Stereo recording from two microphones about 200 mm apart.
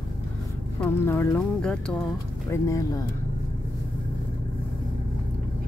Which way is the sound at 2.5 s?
15° left (ahead or behind).